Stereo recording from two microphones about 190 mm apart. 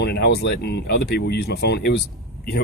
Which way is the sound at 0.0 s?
60° left (ahead or behind).